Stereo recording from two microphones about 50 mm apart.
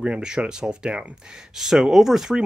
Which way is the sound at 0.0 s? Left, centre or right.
Centre.